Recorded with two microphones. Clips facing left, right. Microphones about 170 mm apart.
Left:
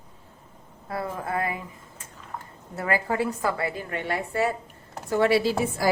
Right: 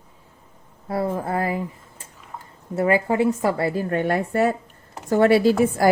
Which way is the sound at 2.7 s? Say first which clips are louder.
Right 7 dB; 25° right (ahead or behind).